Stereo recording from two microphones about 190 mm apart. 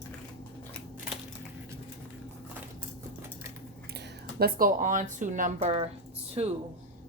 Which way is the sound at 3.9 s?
55° right (ahead or behind).